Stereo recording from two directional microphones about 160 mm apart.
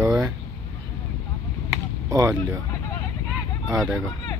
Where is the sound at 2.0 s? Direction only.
20° right (ahead or behind).